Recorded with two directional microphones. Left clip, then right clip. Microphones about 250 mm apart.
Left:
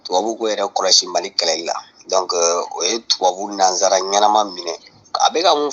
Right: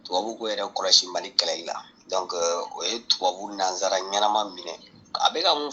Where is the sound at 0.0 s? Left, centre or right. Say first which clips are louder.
Left 9 dB; left.